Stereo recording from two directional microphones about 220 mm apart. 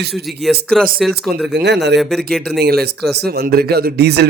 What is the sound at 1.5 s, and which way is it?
Speech, 50° right (ahead or behind).